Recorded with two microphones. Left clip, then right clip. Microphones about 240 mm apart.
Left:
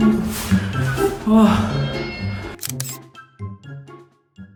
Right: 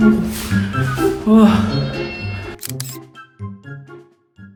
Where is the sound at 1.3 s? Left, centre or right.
Centre.